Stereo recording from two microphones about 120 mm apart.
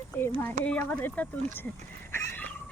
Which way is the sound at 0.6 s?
10° left (ahead or behind).